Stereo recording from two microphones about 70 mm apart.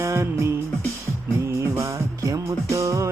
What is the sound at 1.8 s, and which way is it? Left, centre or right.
Music, right.